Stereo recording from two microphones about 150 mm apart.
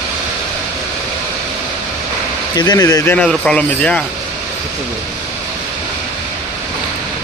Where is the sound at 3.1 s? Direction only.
5° left (ahead or behind).